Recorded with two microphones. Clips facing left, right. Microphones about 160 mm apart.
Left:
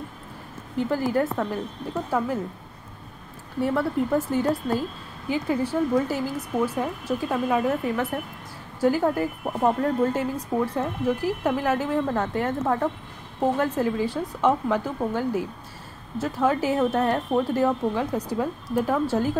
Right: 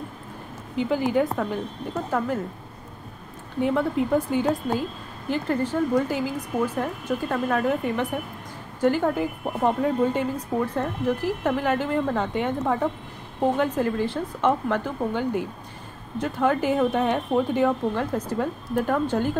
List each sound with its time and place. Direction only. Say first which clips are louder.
0.7 s speech: right 1 dB; centre (ahead or behind)
3.6 s speech: right 1 dB; centre (ahead or behind)
10.3 s speech: even; 10° left (ahead or behind)